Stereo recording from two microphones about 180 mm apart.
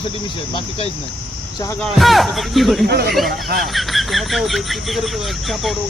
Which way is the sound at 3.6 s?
Centre (ahead or behind).